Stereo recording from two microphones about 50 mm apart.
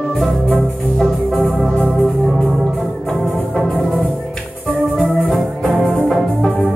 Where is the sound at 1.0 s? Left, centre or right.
Centre.